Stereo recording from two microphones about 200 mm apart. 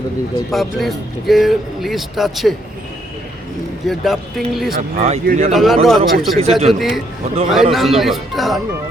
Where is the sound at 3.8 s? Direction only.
Centre (ahead or behind).